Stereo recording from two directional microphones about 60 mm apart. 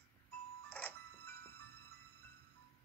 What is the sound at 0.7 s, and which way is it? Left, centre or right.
Music, left.